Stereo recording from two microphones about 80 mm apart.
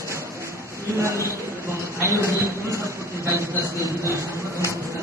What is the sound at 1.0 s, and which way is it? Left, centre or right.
Speech, right.